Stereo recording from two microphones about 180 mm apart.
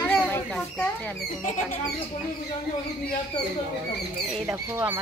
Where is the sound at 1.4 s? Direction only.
40° left (ahead or behind).